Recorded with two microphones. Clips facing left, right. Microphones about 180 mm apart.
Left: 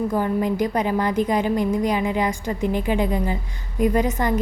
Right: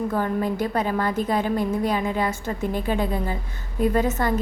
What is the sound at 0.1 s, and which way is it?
A woman's voice, 15° left (ahead or behind).